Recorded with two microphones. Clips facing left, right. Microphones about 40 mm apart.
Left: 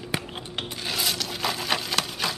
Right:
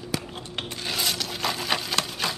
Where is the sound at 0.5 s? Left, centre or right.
Centre.